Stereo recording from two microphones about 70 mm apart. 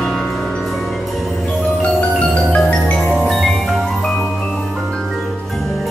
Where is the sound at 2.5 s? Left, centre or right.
Left.